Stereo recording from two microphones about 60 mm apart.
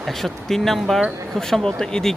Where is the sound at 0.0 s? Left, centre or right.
Centre.